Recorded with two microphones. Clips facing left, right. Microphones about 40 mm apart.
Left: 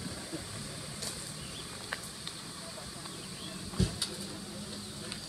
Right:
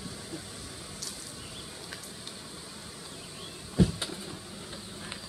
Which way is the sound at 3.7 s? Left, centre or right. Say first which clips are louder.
Right 8 dB; right.